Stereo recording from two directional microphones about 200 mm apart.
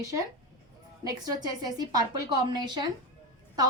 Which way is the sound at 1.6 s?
20° right (ahead or behind).